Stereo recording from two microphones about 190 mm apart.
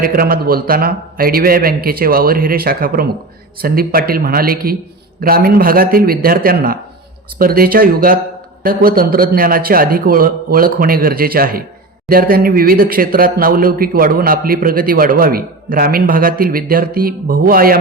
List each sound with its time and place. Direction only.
0.0 s speech: 50° right (ahead or behind)